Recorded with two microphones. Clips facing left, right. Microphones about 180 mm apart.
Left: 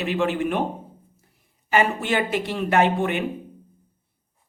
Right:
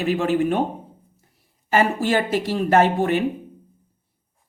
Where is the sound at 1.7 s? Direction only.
40° right (ahead or behind).